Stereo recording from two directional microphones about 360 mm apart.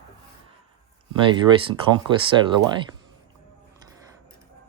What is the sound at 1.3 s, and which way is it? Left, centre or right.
Speech, centre.